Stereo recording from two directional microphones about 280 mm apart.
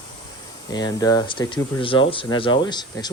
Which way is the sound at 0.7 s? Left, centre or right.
Centre.